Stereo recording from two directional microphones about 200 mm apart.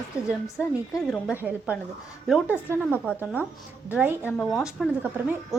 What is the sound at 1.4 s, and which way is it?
A woman's voice, 10° right (ahead or behind).